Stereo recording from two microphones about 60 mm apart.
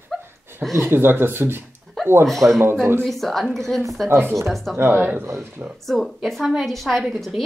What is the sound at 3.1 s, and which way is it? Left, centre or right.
Speech, centre.